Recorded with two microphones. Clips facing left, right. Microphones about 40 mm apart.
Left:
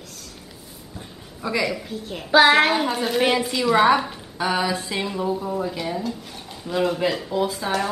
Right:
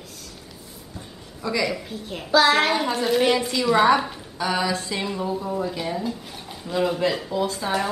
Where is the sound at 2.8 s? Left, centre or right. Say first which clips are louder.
Right 1 dB; centre.